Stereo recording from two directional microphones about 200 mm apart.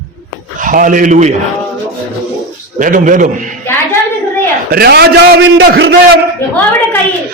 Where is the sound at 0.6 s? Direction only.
40° right (ahead or behind).